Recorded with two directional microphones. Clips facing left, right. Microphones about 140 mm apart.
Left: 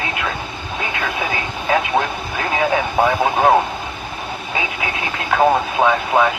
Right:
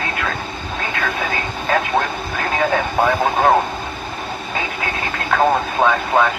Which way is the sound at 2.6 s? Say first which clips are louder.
Left 1 dB; 10° left (ahead or behind).